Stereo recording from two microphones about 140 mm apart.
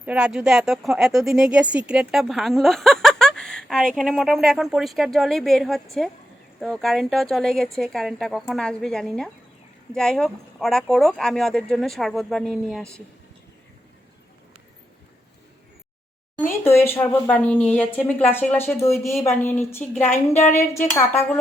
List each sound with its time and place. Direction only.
0.0 s speech: 10° right (ahead or behind)
16.5 s speech: 15° left (ahead or behind)